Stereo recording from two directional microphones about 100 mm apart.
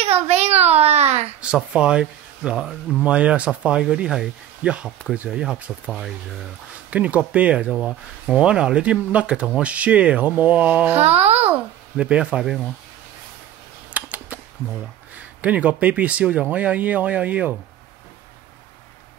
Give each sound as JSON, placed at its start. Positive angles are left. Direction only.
{"t": 0.0, "sound": "a sound", "side_deg": -90}
{"t": 1.4, "sound": "speech", "side_deg": -10}
{"t": 11.0, "sound": "a child's voice", "side_deg": -90}
{"t": 11.5, "sound": "speech", "side_deg": -10}
{"t": 13.9, "sound": "typing", "side_deg": -15}
{"t": 15.1, "sound": "speech", "side_deg": -15}